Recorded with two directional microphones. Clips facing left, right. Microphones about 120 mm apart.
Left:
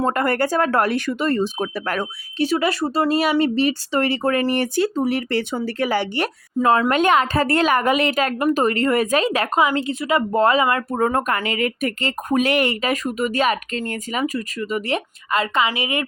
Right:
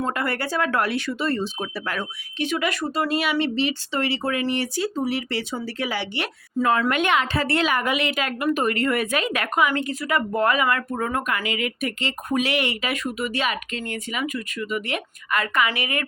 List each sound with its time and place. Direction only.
0.0 s speech: 45° left (ahead or behind)
6.6 s speech: 30° left (ahead or behind)